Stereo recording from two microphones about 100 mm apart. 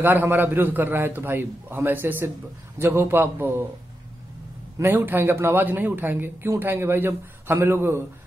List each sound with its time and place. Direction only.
0.0 s a man's voice: 20° right (ahead or behind)
4.7 s a man's voice: 20° right (ahead or behind)